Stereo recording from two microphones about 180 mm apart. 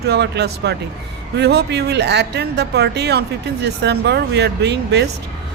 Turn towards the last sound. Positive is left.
turn(degrees=-70)  # may be behind; listen again after turning